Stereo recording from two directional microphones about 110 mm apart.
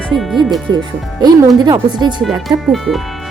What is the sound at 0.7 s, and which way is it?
A woman's voice, 35° right (ahead or behind).